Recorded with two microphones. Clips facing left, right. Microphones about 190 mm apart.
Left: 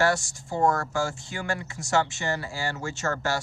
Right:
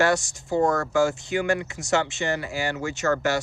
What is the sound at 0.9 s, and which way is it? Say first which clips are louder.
Speech: right 7 dB; 20° right (ahead or behind).